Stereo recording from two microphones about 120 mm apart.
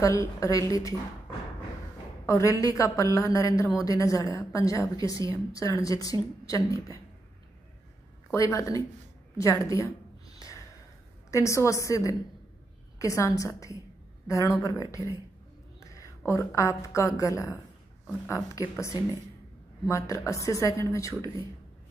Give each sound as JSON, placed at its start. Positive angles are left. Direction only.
{"t": 0.0, "sound": "speech", "side_deg": 25}
{"t": 2.2, "sound": "speech", "side_deg": 25}
{"t": 8.3, "sound": "speech", "side_deg": 25}
{"t": 9.4, "sound": "a sound", "side_deg": 25}
{"t": 11.2, "sound": "a woman's voice", "side_deg": 25}
{"t": 16.3, "sound": "speech", "side_deg": 25}